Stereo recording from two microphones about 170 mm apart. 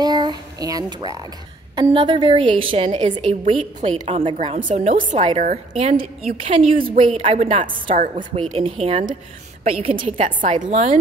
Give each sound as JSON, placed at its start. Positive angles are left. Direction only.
{"t": 0.0, "sound": "a woman's voice", "side_deg": -25}
{"t": 4.6, "sound": "a woman's voice", "side_deg": -45}
{"t": 9.9, "sound": "a woman's voice", "side_deg": -45}